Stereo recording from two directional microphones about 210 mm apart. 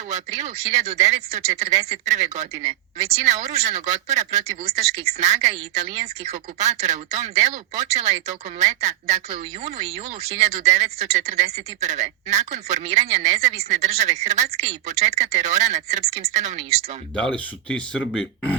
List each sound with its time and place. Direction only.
0.1 s speech: 35° right (ahead or behind)
17.2 s speech: 5° left (ahead or behind)